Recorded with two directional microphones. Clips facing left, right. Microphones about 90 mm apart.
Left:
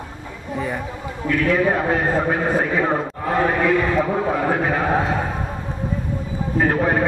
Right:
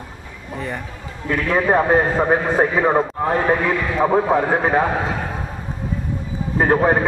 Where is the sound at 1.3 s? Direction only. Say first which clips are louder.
Right 1 dB; 35° right (ahead or behind).